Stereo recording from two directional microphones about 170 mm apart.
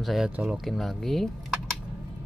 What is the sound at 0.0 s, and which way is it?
Speech, centre (ahead or behind).